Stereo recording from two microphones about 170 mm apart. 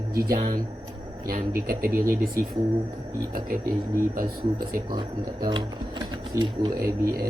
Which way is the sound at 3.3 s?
55° right (ahead or behind).